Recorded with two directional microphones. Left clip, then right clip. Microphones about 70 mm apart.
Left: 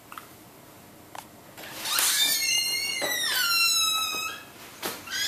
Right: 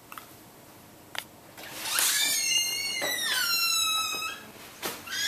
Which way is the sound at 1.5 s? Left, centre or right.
Centre.